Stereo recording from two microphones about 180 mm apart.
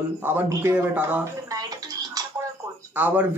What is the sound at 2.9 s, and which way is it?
Speech, 10° right (ahead or behind).